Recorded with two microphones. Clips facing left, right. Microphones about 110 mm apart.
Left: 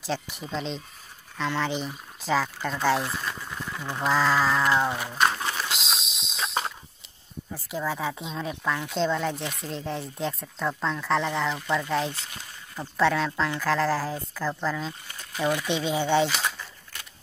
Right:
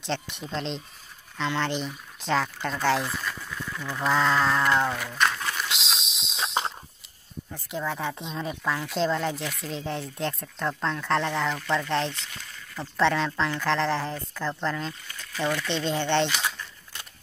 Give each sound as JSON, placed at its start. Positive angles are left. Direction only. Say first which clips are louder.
{"t": 0.0, "sound": "a woman's voice", "louder": "even", "side_deg": 5}
{"t": 3.4, "sound": "a sound", "louder": "even", "side_deg": 25}
{"t": 4.0, "sound": "a woman's voice", "louder": "even", "side_deg": 5}
{"t": 5.4, "sound": "a sound", "louder": "left 1 dB", "side_deg": 25}
{"t": 5.7, "sound": "a sound", "louder": "left 1 dB", "side_deg": 0}
{"t": 7.5, "sound": "a woman's voice", "louder": "left 1 dB", "side_deg": 0}
{"t": 12.1, "sound": "speech", "louder": "left 1 dB", "side_deg": 35}
{"t": 12.9, "sound": "a woman's voice", "louder": "even", "side_deg": 0}
{"t": 15.3, "sound": "speech", "louder": "left 2 dB", "side_deg": 15}